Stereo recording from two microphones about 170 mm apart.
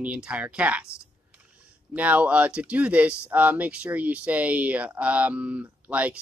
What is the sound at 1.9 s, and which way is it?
Speech, 10° right (ahead or behind).